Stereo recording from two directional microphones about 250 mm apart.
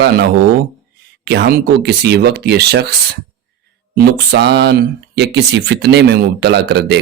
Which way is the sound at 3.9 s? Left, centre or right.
Right.